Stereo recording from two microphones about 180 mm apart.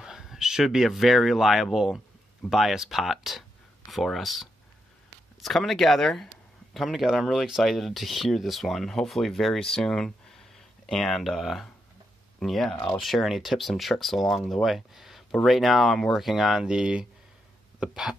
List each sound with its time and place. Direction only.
0.0 s speech: centre (ahead or behind)
12.7 s speech: 20° left (ahead or behind)
13.0 s speech: centre (ahead or behind)